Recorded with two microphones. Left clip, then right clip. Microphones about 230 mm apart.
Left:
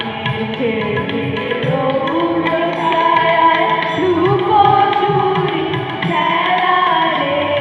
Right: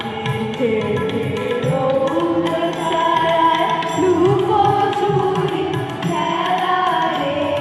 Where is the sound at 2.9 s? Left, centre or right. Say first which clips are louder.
Left 3 dB; left.